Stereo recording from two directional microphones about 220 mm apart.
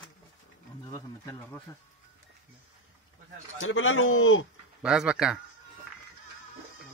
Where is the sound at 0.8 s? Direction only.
15° left (ahead or behind).